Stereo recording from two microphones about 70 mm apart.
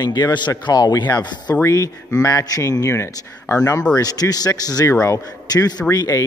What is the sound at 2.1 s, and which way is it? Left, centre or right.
Speech, left.